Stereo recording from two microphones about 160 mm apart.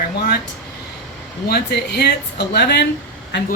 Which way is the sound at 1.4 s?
85° left.